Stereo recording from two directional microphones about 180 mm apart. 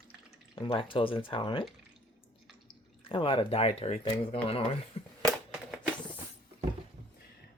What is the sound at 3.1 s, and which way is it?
Speech, 30° left (ahead or behind).